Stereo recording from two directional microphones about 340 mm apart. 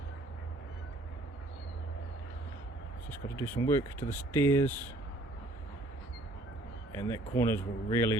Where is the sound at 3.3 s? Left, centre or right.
Centre.